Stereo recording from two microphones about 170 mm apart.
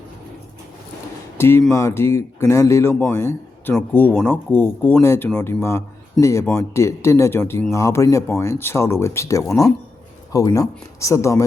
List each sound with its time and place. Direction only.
1.4 s a man's voice: 15° left (ahead or behind)